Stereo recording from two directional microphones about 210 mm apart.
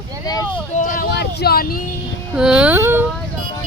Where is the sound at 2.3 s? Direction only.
5° right (ahead or behind).